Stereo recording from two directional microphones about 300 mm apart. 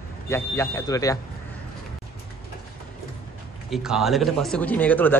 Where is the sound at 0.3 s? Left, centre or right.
Centre.